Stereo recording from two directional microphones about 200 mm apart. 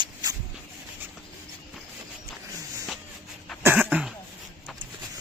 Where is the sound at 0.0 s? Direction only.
20° right (ahead or behind).